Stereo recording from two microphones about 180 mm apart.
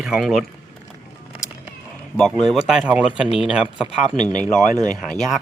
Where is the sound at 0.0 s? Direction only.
5° right (ahead or behind).